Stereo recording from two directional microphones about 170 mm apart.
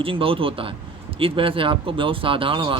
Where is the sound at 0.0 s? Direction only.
30° right (ahead or behind).